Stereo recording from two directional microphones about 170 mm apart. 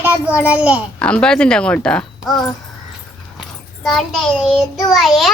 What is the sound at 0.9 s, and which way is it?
A child's voice, 5° left (ahead or behind).